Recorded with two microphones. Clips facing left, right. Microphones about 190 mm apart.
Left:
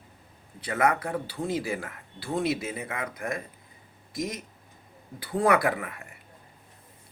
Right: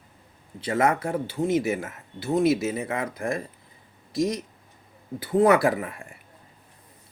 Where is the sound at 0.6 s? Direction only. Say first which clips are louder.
Right 3 dB; 30° right (ahead or behind).